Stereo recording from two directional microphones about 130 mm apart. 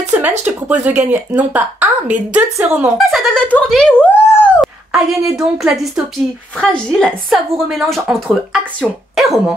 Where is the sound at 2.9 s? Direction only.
Centre (ahead or behind).